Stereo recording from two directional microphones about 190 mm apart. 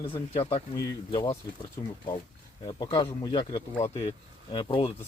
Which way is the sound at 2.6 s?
25° left (ahead or behind).